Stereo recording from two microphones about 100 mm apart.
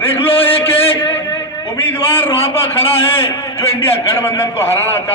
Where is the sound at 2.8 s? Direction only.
70° left (ahead or behind).